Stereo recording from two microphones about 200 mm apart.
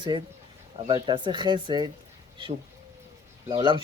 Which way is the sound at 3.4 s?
25° right (ahead or behind).